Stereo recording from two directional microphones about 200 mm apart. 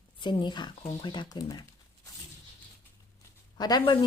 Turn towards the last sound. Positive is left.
turn(degrees=20)  # may be behind; listen again after turning